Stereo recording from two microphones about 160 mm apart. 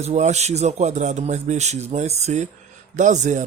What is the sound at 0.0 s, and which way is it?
Speech, 45° right (ahead or behind).